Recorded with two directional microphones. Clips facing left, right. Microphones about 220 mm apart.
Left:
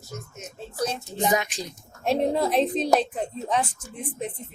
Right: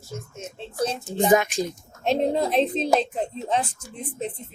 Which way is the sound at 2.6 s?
25° right (ahead or behind).